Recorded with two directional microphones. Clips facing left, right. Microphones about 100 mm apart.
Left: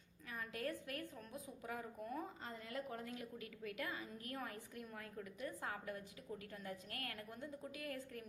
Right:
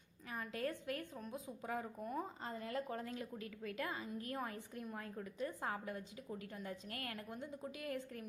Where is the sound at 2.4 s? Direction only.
35° right (ahead or behind).